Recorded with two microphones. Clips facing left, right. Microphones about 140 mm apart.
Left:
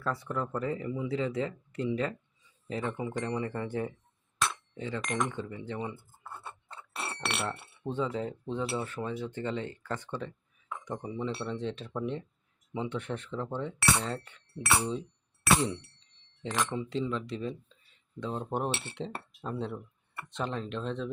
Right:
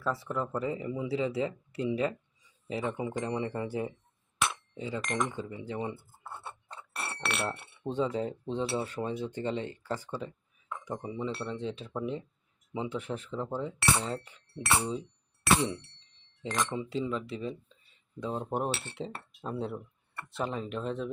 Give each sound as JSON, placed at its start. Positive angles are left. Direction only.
{"t": 0.0, "sound": "speech", "side_deg": 0}
{"t": 0.6, "sound": "speech", "side_deg": -20}
{"t": 4.9, "sound": "speech", "side_deg": -5}
{"t": 5.7, "sound": "speech", "side_deg": -25}
{"t": 7.1, "sound": "speech", "side_deg": 0}
{"t": 8.1, "sound": "speech", "side_deg": -25}
{"t": 10.1, "sound": "speech", "side_deg": -5}
{"t": 16.6, "sound": "speech", "side_deg": -15}